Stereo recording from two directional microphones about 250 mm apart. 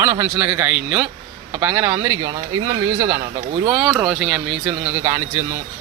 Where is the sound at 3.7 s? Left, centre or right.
Centre.